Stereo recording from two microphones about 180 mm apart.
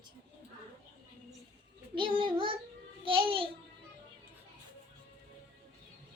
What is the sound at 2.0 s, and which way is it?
Child singing, 30° right (ahead or behind).